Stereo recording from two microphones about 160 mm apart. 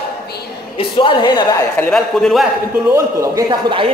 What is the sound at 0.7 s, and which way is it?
Speech, 30° left (ahead or behind).